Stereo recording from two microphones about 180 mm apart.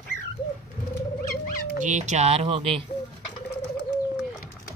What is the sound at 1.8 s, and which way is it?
Speech, 40° right (ahead or behind).